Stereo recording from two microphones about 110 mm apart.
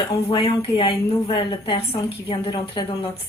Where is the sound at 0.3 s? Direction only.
55° left (ahead or behind).